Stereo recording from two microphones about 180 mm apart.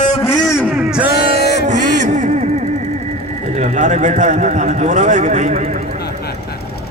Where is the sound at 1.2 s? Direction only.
40° right (ahead or behind).